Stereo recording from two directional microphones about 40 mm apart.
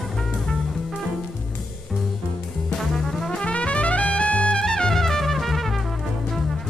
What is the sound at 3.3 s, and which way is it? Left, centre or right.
Trumpet, left.